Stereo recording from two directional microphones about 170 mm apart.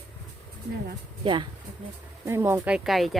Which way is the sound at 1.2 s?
30° right (ahead or behind).